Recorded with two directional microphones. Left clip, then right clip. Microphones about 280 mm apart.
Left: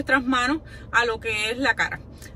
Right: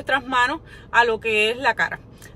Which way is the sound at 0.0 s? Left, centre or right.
Centre.